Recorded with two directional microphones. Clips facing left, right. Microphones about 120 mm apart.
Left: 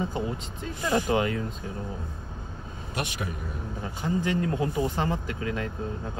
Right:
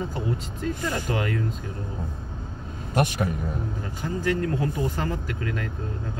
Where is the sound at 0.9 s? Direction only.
25° left (ahead or behind).